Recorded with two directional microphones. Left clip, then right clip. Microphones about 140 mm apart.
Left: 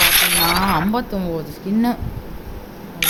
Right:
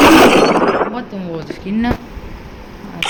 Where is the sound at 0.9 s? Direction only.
30° left (ahead or behind).